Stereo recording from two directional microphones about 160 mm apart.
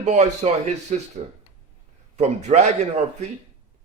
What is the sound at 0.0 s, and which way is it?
Speech, 45° right (ahead or behind).